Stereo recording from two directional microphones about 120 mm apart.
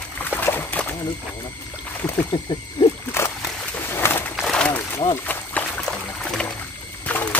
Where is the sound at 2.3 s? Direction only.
40° left (ahead or behind).